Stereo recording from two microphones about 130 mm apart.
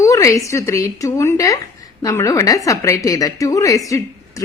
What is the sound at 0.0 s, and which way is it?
A woman's voice, 25° left (ahead or behind).